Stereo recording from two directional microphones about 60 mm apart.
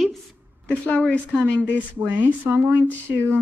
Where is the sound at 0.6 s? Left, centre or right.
Centre.